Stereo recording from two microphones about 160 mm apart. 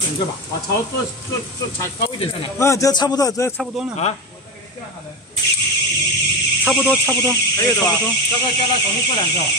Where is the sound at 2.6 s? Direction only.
20° left (ahead or behind).